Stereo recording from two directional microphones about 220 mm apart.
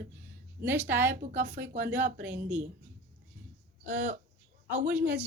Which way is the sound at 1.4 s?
55° right (ahead or behind).